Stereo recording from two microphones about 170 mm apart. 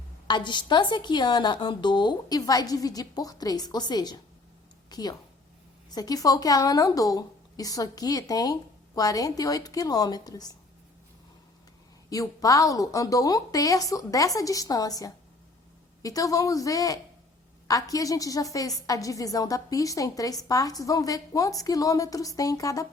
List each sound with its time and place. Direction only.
0.3 s a woman's voice: 25° left (ahead or behind)
12.1 s a woman's voice: 20° left (ahead or behind)